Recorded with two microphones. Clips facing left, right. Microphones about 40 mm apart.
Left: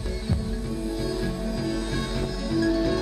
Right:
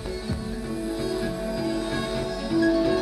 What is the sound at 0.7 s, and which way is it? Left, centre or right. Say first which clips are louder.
Music: right 2 dB; centre.